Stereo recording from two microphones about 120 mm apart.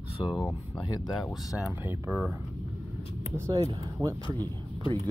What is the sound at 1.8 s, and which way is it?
Speech, 15° right (ahead or behind).